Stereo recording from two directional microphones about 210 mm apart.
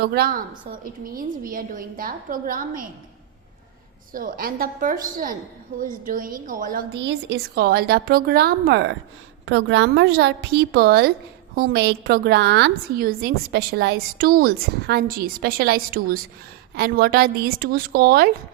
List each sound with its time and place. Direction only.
0.0 s a woman's voice: 50° right (ahead or behind)
4.1 s a woman's voice: 45° right (ahead or behind)
9.5 s a woman's voice: 65° right (ahead or behind); by 18.3 s 45° right (ahead or behind)